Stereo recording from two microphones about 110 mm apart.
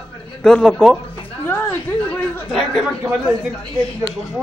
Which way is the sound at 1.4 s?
15° left (ahead or behind).